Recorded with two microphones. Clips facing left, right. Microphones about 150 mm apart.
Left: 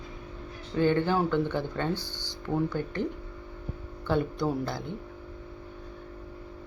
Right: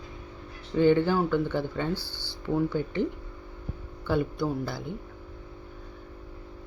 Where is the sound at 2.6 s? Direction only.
15° right (ahead or behind).